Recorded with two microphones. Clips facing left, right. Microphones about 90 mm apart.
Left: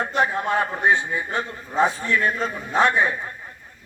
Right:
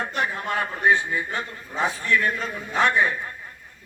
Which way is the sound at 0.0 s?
20° left (ahead or behind).